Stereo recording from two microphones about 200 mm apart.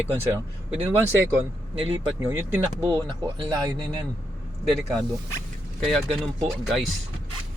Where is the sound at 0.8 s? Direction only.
10° right (ahead or behind).